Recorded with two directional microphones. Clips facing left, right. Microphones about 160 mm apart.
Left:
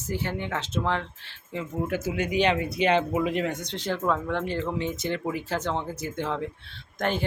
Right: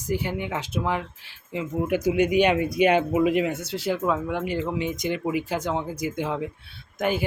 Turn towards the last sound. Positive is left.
turn(degrees=-10)  # may be behind; listen again after turning